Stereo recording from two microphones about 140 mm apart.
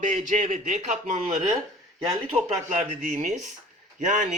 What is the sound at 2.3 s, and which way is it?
Speech, 45° right (ahead or behind).